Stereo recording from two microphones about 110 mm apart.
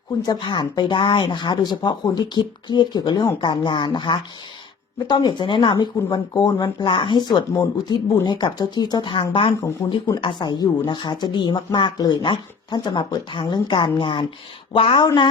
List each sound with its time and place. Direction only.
0.2 s speech: 40° left (ahead or behind)
9.6 s speech: 30° left (ahead or behind)
10.2 s speech: 45° left (ahead or behind)